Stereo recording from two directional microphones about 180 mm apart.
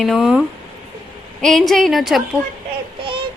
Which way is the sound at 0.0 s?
Centre (ahead or behind).